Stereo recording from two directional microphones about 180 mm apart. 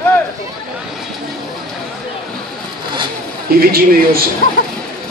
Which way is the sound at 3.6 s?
55° right (ahead or behind).